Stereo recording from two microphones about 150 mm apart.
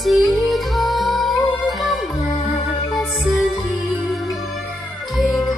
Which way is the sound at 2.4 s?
40° left (ahead or behind).